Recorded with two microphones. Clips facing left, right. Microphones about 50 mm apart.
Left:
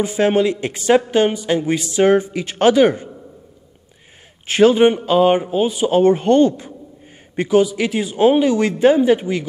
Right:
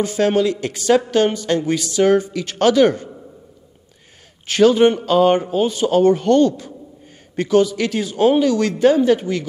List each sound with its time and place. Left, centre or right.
0.0 s speech: centre
4.5 s speech: left